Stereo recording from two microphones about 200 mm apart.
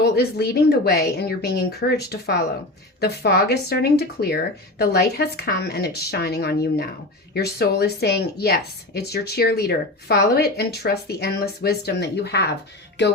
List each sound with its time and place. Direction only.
0.0 s speech: 55° left (ahead or behind)
13.0 s music: 60° left (ahead or behind)